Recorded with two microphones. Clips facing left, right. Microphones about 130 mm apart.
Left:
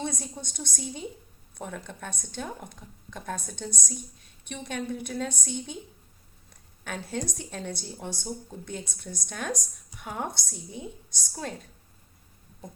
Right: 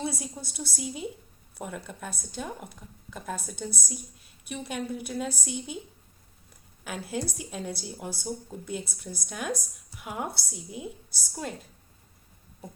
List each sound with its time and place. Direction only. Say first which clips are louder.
0.0 s a woman's voice: even; 5° right (ahead or behind)
6.8 s a woman's voice: even; 5° right (ahead or behind)